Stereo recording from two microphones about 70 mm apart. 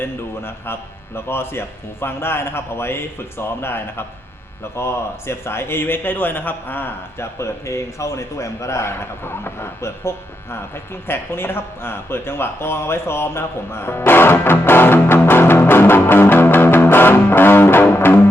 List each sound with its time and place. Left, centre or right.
0.0 s speech: left